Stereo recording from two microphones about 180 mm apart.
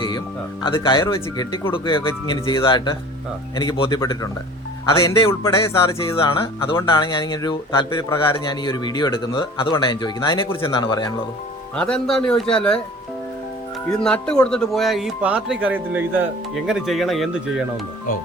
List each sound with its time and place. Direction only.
0.6 s speech: 25° left (ahead or behind)
11.8 s a man's voice: 5° left (ahead or behind)
14.0 s a man's voice: 5° left (ahead or behind)